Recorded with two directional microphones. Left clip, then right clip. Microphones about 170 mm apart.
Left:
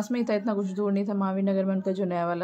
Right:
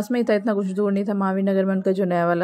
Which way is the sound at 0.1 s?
40° right (ahead or behind).